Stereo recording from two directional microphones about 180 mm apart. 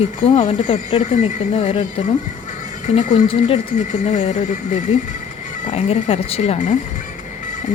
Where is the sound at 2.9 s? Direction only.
40° left (ahead or behind).